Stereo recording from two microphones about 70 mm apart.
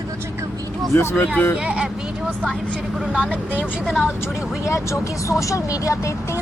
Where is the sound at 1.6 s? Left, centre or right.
Centre.